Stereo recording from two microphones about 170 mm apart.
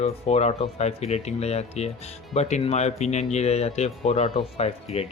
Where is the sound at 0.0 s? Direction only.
40° left (ahead or behind).